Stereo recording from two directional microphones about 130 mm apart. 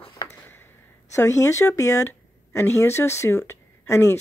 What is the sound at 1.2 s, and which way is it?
Speech, 20° left (ahead or behind).